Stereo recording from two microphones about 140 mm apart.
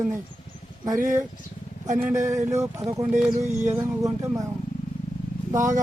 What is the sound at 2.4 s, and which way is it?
Speech, 55° right (ahead or behind).